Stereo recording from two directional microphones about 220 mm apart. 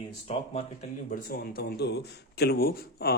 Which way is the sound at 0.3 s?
25° left (ahead or behind).